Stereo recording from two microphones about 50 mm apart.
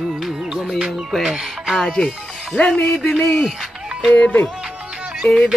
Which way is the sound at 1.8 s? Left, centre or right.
Centre.